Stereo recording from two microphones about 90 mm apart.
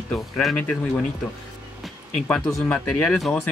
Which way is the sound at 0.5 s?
15° left (ahead or behind).